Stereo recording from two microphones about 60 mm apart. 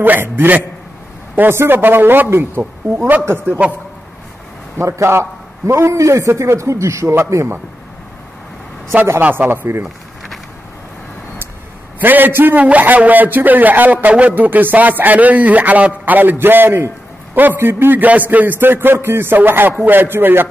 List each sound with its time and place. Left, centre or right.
0.0 s a man's voice: right
3.4 s a man's voice: right
4.7 s a man's voice: right
9.2 s a man's voice: right
12.0 s a man's voice: right